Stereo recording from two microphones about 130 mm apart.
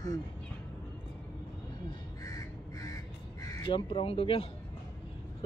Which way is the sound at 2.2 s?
25° left (ahead or behind).